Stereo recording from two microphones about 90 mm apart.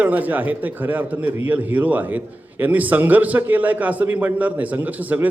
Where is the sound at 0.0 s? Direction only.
20° right (ahead or behind).